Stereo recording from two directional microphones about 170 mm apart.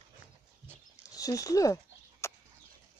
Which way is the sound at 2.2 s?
15° left (ahead or behind).